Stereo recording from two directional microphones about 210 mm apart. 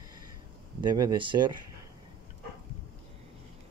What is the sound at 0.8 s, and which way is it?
Speech, 20° right (ahead or behind).